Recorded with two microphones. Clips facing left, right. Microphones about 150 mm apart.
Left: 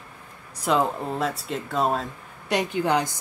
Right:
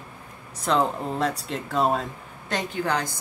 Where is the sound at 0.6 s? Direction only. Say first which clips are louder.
Even; 5° left (ahead or behind).